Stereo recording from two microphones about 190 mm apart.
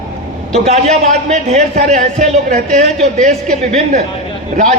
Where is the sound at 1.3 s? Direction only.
40° right (ahead or behind).